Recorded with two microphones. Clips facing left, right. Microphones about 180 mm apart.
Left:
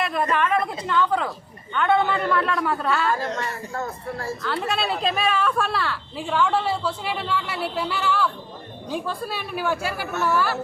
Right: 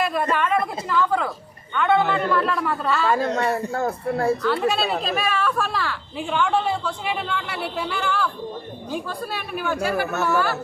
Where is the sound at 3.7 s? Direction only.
70° right (ahead or behind).